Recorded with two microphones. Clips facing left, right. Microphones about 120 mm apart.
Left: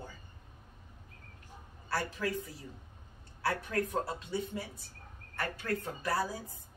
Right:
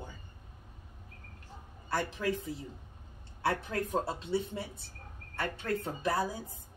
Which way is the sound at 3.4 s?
25° right (ahead or behind).